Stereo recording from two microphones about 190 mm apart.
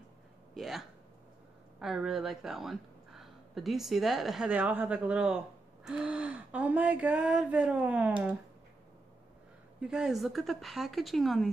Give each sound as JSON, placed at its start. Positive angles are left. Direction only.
{"t": 0.6, "sound": "speech", "side_deg": 0}
{"t": 5.9, "sound": "a sound", "side_deg": -5}
{"t": 9.8, "sound": "speech", "side_deg": -5}